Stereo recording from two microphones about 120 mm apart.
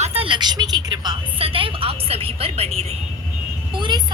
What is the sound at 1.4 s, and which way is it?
Music, 50° right (ahead or behind).